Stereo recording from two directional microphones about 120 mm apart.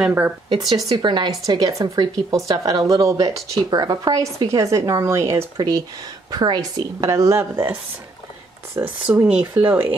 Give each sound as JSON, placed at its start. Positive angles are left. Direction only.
{"t": 0.0, "sound": "speech", "side_deg": -10}
{"t": 0.5, "sound": "a woman's voice", "side_deg": -35}
{"t": 7.1, "sound": "a woman's voice", "side_deg": -25}